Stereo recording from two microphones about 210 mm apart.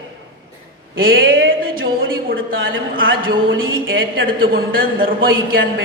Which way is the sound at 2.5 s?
70° right (ahead or behind).